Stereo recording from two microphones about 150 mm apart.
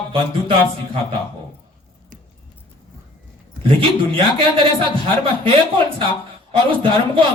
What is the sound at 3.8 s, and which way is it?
Music, 35° right (ahead or behind).